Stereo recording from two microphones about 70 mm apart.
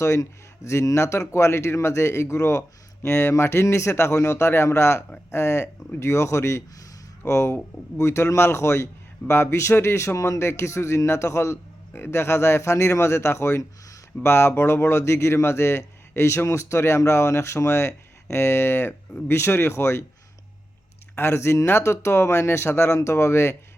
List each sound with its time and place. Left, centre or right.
0.0 s a man's voice: left
21.2 s a man's voice: left